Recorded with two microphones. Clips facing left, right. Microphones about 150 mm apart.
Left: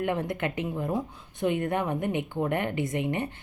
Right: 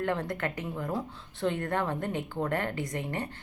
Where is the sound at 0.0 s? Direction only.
20° left (ahead or behind).